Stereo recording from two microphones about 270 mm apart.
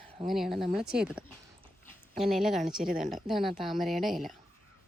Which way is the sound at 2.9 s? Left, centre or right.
Right.